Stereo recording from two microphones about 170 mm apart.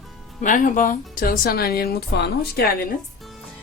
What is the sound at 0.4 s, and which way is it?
Speech, 50° left (ahead or behind).